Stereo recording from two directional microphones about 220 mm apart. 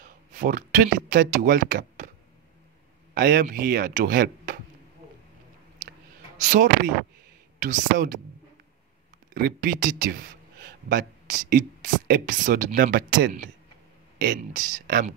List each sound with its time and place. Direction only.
0.0 s speech: 40° right (ahead or behind)
3.2 s speech: 40° right (ahead or behind)
6.4 s speech: 35° right (ahead or behind)
9.3 s speech: 40° right (ahead or behind)